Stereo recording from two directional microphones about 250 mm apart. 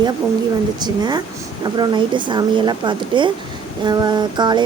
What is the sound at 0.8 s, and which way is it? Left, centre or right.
A woman's voice, centre.